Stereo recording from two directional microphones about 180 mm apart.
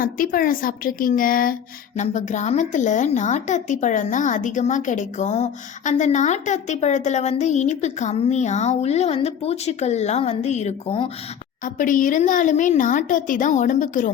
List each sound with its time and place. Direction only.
0.0 s a woman's voice: 50° left (ahead or behind)
2.0 s speech: 40° left (ahead or behind)
11.6 s a woman's voice: 45° left (ahead or behind)